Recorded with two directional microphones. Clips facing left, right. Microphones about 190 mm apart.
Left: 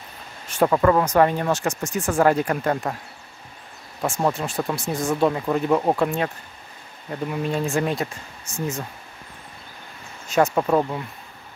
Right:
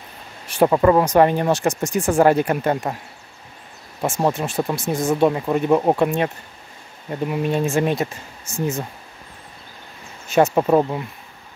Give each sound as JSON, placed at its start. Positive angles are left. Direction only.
{"t": 0.6, "sound": "speech", "side_deg": -20}
{"t": 4.0, "sound": "speech", "side_deg": -20}
{"t": 8.5, "sound": "speech", "side_deg": -10}
{"t": 10.3, "sound": "speech", "side_deg": -20}